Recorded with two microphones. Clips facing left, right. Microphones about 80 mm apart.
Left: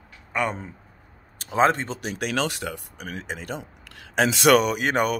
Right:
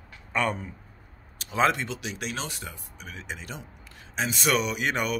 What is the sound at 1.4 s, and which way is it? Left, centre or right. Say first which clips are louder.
Speech: left 4 dB; left.